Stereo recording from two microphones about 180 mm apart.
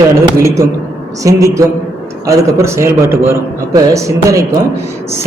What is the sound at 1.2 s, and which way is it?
A man's voice, 15° right (ahead or behind).